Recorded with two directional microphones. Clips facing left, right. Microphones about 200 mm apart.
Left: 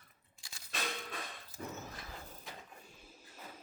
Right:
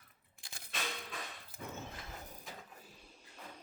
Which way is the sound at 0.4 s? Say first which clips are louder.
Right 3 dB; 55° right (ahead or behind).